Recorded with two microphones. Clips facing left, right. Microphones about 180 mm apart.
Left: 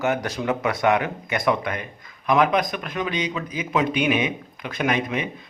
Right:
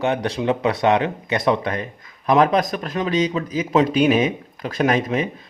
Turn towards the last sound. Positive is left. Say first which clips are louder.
# right 4 dB
turn(degrees=-40)  # may be behind; listen again after turning